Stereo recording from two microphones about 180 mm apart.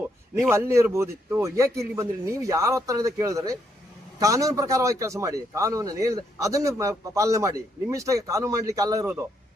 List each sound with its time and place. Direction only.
0.5 s a man's voice: 15° right (ahead or behind)